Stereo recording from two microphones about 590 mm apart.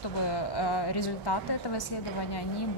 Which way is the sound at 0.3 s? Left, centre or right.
Left.